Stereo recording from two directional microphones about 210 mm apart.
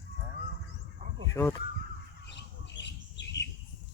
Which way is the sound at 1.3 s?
15° left (ahead or behind).